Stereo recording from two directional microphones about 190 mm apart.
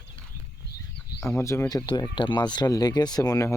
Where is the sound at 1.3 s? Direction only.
15° left (ahead or behind).